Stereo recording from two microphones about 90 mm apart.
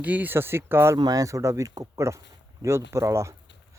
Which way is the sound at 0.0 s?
15° right (ahead or behind).